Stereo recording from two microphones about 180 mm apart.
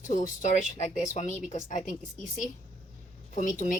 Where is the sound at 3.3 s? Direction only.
45° left (ahead or behind).